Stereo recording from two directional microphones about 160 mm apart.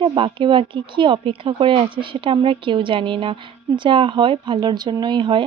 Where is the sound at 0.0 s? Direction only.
30° right (ahead or behind).